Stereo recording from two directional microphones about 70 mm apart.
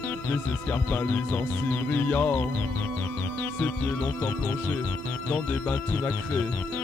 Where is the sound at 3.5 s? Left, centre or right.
Left.